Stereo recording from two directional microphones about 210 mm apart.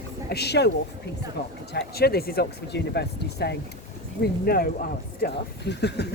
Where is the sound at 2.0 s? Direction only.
45° left (ahead or behind).